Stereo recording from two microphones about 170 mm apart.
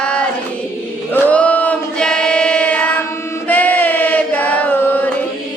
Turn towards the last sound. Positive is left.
turn(degrees=10)  # may be behind; listen again after turning